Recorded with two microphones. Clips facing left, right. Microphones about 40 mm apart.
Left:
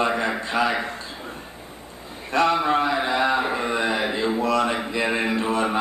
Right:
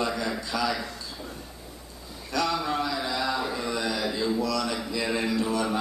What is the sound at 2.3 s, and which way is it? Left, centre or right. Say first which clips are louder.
Mantra: left 7 dB; left.